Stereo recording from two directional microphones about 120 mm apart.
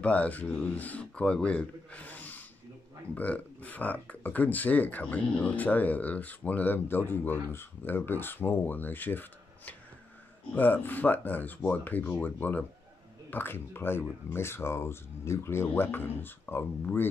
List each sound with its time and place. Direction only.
0.0 s speech: 10° left (ahead or behind)
10.5 s speech: 15° left (ahead or behind)